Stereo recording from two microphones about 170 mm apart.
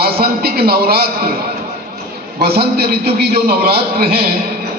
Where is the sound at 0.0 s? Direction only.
65° right (ahead or behind).